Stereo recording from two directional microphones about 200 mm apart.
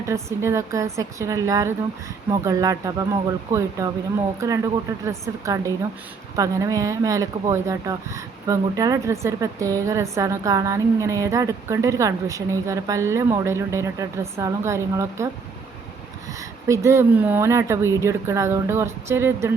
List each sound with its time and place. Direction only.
0.1 s speech: 15° right (ahead or behind)
16.6 s speech: 15° right (ahead or behind)